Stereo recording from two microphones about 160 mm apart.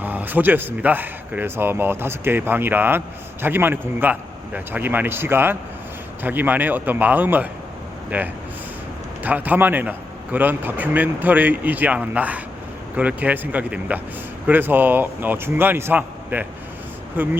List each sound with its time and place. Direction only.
0.0 s speech: 10° right (ahead or behind)